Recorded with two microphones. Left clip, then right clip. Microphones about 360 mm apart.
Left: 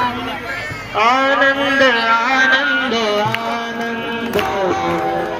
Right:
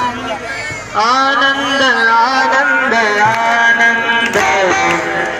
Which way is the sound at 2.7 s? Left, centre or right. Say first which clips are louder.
Right 5 dB; centre.